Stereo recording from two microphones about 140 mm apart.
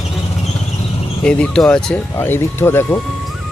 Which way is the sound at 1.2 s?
5° left (ahead or behind).